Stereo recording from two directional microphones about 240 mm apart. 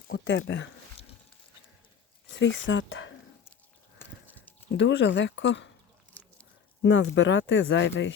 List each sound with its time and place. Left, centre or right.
0.1 s speech: left
2.4 s speech: left
4.8 s speech: left
6.8 s speech: left